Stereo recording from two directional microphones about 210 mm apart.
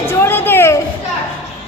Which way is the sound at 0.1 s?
10° left (ahead or behind).